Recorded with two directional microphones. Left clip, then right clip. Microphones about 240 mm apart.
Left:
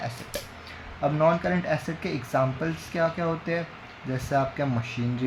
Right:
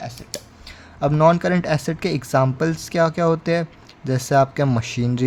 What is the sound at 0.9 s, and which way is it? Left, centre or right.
Speech, right.